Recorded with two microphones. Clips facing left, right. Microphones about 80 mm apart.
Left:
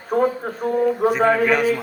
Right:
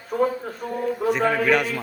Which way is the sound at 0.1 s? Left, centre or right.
Left.